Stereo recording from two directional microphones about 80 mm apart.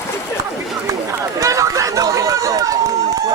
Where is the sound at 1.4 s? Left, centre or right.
Right.